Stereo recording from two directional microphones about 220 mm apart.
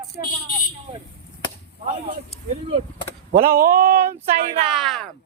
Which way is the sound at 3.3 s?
40° right (ahead or behind).